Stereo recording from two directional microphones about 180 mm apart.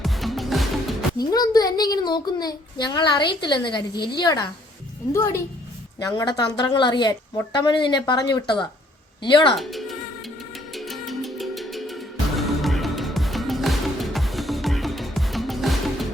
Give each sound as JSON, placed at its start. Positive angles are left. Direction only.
{"t": 0.0, "sound": "music", "side_deg": 0}
{"t": 1.2, "sound": "a child's voice", "side_deg": 20}
{"t": 9.6, "sound": "speech", "side_deg": 0}
{"t": 10.2, "sound": "music", "side_deg": 0}